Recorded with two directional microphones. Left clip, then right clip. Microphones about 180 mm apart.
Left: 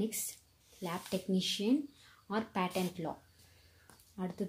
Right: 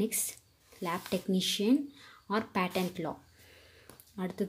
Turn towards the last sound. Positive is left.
turn(degrees=-15)  # may be behind; listen again after turning